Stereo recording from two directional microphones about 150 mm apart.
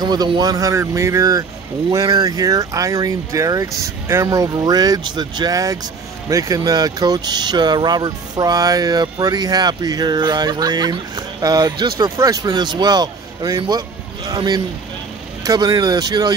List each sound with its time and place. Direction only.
0.0 s speech: 25° right (ahead or behind)